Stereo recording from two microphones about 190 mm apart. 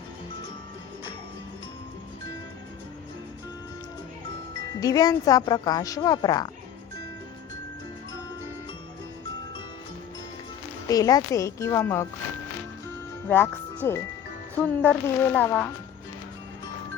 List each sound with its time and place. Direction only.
4.8 s speech: 20° left (ahead or behind)
10.8 s speech: 20° left (ahead or behind)
13.2 s speech: 10° left (ahead or behind)